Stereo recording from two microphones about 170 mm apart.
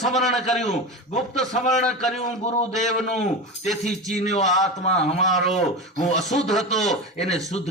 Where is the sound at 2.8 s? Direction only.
40° left (ahead or behind).